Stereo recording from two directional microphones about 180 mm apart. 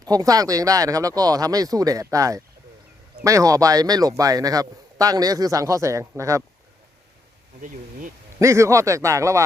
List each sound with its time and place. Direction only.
0.0 s speech: 20° right (ahead or behind)
7.6 s speech: 45° right (ahead or behind)
8.4 s speech: 15° right (ahead or behind)